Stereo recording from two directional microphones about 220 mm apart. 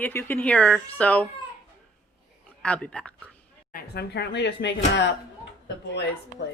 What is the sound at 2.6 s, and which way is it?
Speech, 5° left (ahead or behind).